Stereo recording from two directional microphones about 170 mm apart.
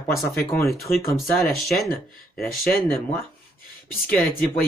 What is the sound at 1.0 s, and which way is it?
Speech, 60° left (ahead or behind).